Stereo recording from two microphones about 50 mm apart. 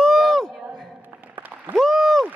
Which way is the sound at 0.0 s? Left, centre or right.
Centre.